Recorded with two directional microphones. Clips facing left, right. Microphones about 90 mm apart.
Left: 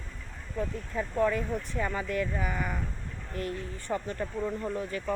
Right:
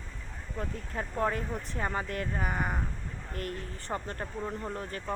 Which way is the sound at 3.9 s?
40° right (ahead or behind).